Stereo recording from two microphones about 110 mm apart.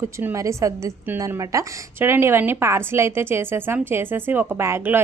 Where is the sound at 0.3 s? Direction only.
30° right (ahead or behind).